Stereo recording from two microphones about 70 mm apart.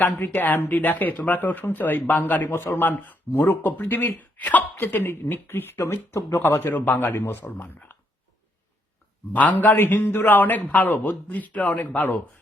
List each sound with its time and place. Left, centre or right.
0.0 s speech: left
2.5 s speech: left
9.3 s speech: left